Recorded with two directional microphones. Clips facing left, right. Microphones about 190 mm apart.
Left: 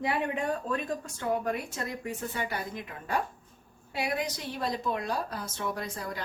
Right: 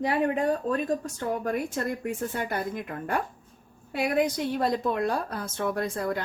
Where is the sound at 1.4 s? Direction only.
50° right (ahead or behind).